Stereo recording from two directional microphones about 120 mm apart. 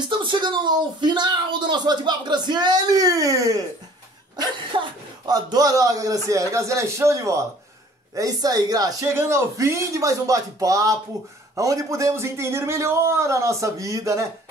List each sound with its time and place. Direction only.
0.1 s speech: 45° right (ahead or behind); by 14.2 s 25° right (ahead or behind)